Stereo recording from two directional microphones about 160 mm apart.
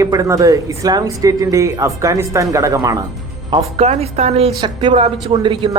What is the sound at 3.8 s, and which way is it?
A woman's voice, 40° right (ahead or behind).